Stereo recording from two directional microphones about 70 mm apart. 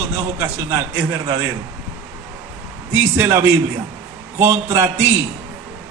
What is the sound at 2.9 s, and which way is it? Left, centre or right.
A man's voice, right.